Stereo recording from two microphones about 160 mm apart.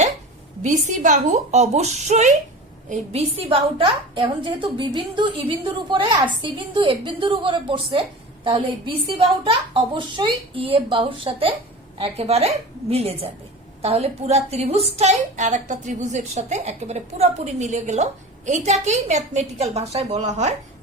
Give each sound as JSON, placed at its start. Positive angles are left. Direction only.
{"t": 0.6, "sound": "a woman's voice", "side_deg": -50}